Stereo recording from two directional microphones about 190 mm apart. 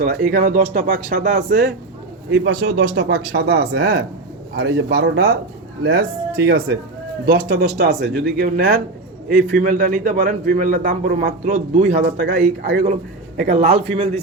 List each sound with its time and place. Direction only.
0.0 s a man's voice: 50° right (ahead or behind)
2.3 s speech: 90° right; by 8.2 s 65° right (ahead or behind)
8.4 s a man's voice: 55° right (ahead or behind); by 14.1 s 30° right (ahead or behind)